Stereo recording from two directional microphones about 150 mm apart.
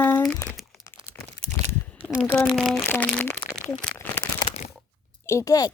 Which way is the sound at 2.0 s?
10° right (ahead or behind).